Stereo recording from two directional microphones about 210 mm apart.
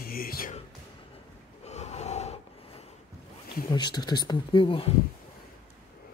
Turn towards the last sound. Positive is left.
turn(degrees=25)  # may be behind; listen again after turning